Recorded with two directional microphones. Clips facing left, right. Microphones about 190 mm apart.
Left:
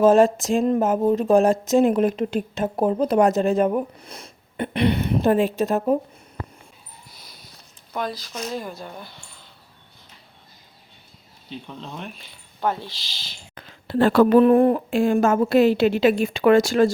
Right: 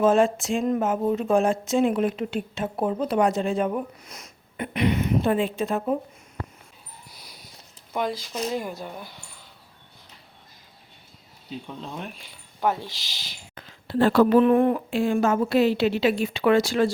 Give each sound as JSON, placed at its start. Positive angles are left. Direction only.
{"t": 0.0, "sound": "speech", "side_deg": 40}
{"t": 7.2, "sound": "a sound", "side_deg": -10}
{"t": 7.9, "sound": "speech", "side_deg": -15}
{"t": 11.6, "sound": "speech", "side_deg": -5}
{"t": 13.7, "sound": "speech", "side_deg": 55}
{"t": 14.3, "sound": "a woman's voice", "side_deg": 40}